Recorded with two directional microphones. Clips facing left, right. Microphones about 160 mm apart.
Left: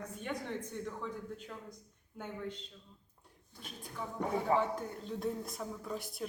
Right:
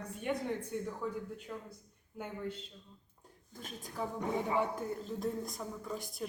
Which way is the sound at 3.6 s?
45° right (ahead or behind).